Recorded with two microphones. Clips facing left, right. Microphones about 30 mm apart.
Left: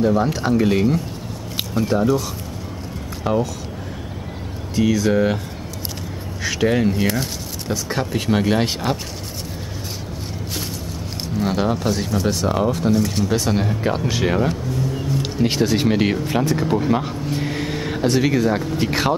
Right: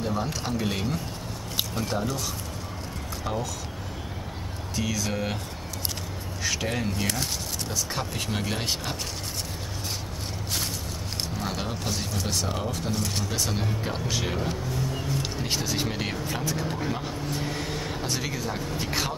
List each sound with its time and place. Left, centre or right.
0.0 s speech: centre
3.3 s speech: left
4.7 s speech: centre
6.6 s speech: centre
11.3 s speech: centre
12.4 s speech: centre
12.7 s speech: centre; by 14.5 s left
14.7 s speech: centre
15.4 s speech: centre
16.6 s speech: centre
16.9 s vehicle: left
18.8 s speech: left